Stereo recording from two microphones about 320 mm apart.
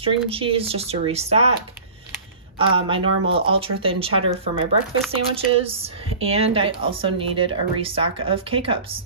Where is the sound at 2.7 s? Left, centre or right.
Centre.